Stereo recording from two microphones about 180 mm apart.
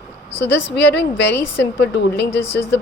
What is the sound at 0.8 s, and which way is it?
A woman's voice, 70° left (ahead or behind).